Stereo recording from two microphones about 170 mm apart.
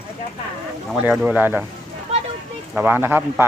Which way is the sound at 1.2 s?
10° right (ahead or behind).